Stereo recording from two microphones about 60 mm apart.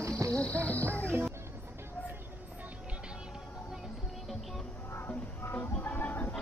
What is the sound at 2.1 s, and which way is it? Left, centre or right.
Music, right.